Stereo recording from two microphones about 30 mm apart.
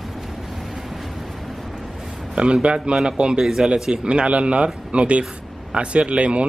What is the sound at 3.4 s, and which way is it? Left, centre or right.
Speech, right.